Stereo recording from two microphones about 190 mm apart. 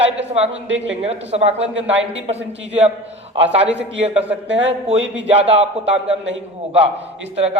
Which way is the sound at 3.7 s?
70° right (ahead or behind).